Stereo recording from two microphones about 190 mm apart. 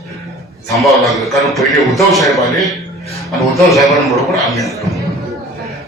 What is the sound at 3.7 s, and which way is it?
A man's voice, centre (ahead or behind).